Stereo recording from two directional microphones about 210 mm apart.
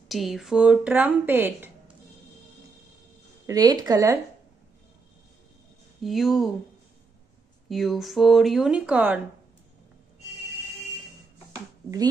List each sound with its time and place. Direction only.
0.1 s speech: centre (ahead or behind)
3.4 s a woman's voice: 20° right (ahead or behind)
6.0 s speech: centre (ahead or behind)
7.6 s speech: centre (ahead or behind)